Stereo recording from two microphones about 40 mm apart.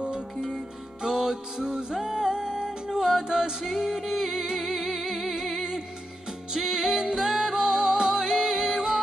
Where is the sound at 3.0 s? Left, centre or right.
Centre.